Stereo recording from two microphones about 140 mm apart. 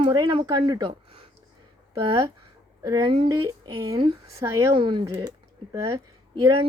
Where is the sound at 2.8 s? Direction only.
25° right (ahead or behind).